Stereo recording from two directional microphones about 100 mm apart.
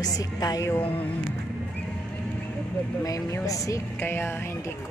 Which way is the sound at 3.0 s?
35° left (ahead or behind).